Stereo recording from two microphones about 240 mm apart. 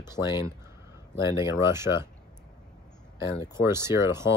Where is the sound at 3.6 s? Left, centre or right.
Centre.